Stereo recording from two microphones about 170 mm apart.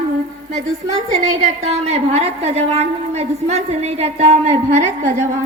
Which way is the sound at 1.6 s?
40° right (ahead or behind).